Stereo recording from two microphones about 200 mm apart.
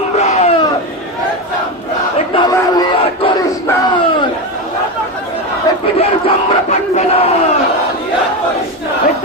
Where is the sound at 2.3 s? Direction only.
20° left (ahead or behind).